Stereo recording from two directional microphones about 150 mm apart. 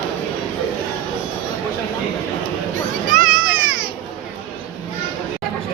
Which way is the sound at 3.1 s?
65° right (ahead or behind).